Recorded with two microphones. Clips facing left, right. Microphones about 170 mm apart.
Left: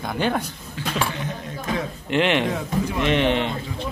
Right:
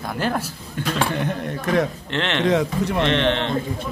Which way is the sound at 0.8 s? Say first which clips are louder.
Right 4 dB; 60° right (ahead or behind).